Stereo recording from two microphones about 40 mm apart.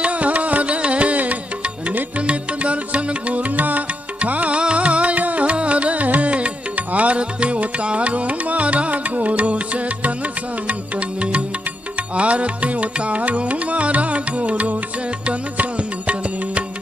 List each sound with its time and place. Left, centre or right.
0.0 s music: right
16.0 s music: right